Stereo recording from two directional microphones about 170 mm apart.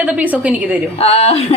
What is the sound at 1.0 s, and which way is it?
Speech, 35° left (ahead or behind).